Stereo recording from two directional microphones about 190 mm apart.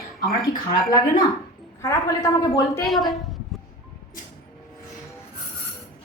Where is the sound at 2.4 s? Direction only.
20° left (ahead or behind).